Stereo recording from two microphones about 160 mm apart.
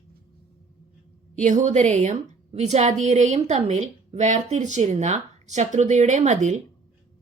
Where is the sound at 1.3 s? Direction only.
50° right (ahead or behind).